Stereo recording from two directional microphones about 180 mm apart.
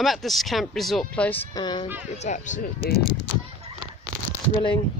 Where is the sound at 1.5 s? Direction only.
25° left (ahead or behind).